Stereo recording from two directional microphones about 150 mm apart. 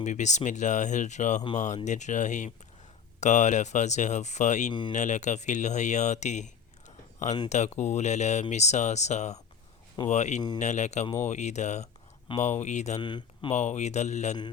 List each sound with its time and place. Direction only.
0.0 s speech: 50° left (ahead or behind)
13.0 s speech: 30° left (ahead or behind)
13.5 s speech: 50° left (ahead or behind)